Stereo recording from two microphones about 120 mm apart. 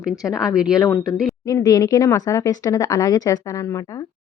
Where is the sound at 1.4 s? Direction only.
30° left (ahead or behind).